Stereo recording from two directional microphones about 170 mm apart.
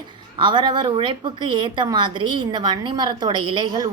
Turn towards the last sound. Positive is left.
turn(degrees=-25)  # may be behind; listen again after turning